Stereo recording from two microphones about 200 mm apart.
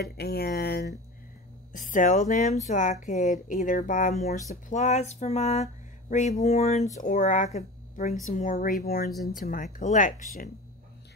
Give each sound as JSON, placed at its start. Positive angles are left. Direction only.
{"t": 0.0, "sound": "speech", "side_deg": 55}
{"t": 1.7, "sound": "speech", "side_deg": 40}